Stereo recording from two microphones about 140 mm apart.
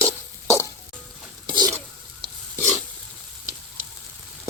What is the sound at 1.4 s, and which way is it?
Stir, 30° right (ahead or behind).